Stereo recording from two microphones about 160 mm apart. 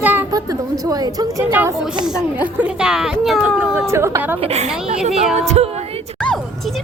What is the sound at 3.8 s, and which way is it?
Speech, 15° right (ahead or behind).